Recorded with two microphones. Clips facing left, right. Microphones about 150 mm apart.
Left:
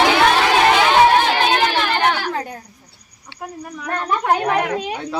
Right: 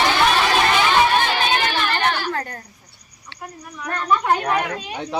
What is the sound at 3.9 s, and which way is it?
A woman's voice, 65° left (ahead or behind).